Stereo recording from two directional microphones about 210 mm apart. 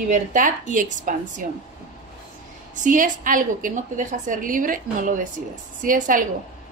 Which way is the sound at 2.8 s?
40° right (ahead or behind).